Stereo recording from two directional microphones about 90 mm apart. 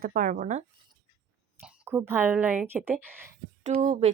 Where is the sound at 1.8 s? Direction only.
25° right (ahead or behind).